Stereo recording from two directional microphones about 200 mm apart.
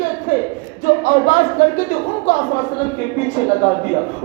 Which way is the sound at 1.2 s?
40° left (ahead or behind).